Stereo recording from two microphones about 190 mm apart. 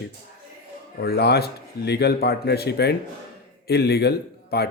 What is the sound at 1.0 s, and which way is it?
Speech, 55° left (ahead or behind).